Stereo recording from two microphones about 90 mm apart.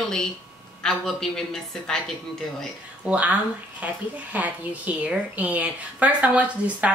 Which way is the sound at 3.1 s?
15° right (ahead or behind).